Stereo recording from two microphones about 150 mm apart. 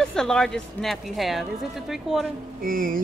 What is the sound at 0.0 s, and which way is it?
A woman's voice, 5° left (ahead or behind).